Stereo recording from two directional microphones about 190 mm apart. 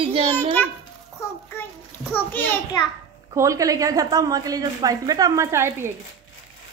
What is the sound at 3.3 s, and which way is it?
Speech, 15° right (ahead or behind).